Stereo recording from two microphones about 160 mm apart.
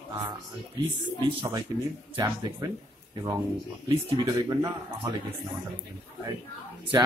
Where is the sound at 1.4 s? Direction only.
25° right (ahead or behind).